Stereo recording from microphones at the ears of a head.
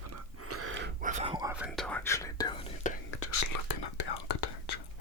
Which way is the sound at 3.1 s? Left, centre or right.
Left.